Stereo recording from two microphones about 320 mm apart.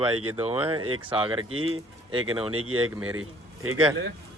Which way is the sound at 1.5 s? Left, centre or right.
Right.